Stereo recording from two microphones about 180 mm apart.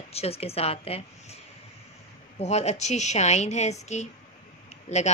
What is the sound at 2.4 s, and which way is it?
A woman's voice, 40° left (ahead or behind).